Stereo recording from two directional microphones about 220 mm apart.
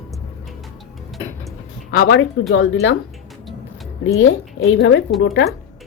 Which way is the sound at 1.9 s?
60° left (ahead or behind).